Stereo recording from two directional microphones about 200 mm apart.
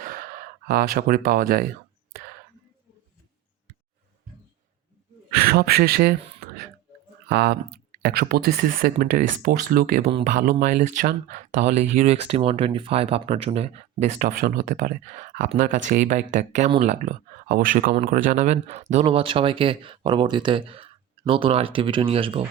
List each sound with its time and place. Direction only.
0.0 s gasp: 45° right (ahead or behind)
5.3 s speech: 50° right (ahead or behind); by 22.4 s 30° right (ahead or behind)